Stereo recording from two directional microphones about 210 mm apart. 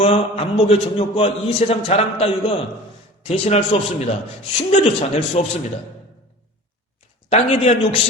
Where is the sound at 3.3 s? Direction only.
30° left (ahead or behind).